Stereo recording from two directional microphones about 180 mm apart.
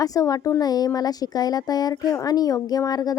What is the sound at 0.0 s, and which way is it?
Speech, 20° left (ahead or behind).